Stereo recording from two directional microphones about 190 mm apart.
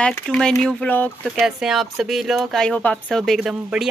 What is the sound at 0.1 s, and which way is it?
Speech, 5° left (ahead or behind).